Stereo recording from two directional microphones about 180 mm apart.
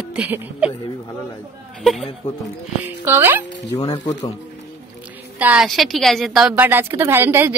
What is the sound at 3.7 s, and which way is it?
Stir, 20° left (ahead or behind).